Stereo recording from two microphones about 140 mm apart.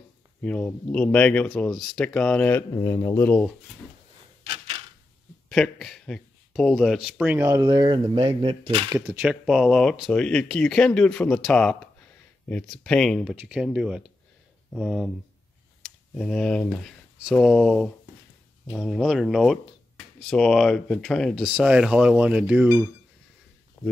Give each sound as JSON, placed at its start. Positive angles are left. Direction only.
{"t": 0.4, "sound": "speech", "side_deg": 10}
{"t": 2.7, "sound": "speech", "side_deg": 25}
{"t": 4.5, "sound": "a sound", "side_deg": -45}
{"t": 5.5, "sound": "speech", "side_deg": 0}
{"t": 7.2, "sound": "speech", "side_deg": -15}
{"t": 7.6, "sound": "speech", "side_deg": -35}
{"t": 9.0, "sound": "speech", "side_deg": -5}
{"t": 13.4, "sound": "speech", "side_deg": -5}
{"t": 16.2, "sound": "speech", "side_deg": 5}
{"t": 21.5, "sound": "speech", "side_deg": -10}
{"t": 23.8, "sound": "speech", "side_deg": 15}